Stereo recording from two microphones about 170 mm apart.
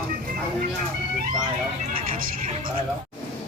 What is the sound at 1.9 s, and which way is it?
Vehicle, 55° right (ahead or behind).